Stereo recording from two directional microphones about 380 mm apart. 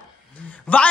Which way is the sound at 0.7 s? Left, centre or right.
Centre.